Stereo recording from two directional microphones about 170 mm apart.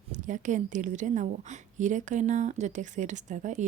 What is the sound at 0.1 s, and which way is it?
A woman's voice, 45° right (ahead or behind).